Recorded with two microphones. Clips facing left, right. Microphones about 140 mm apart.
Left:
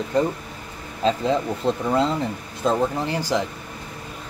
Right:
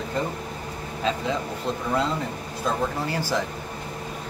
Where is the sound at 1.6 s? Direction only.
30° left (ahead or behind).